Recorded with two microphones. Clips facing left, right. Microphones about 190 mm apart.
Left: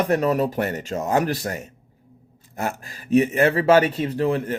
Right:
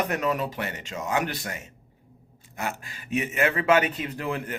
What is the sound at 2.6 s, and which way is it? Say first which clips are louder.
Speech: left 5 dB; 40° left (ahead or behind).